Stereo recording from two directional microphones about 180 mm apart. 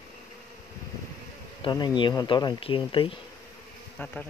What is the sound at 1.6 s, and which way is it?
Speech, 25° left (ahead or behind).